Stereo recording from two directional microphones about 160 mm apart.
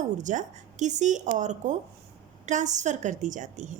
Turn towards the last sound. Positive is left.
turn(degrees=-50)  # may be behind; listen again after turning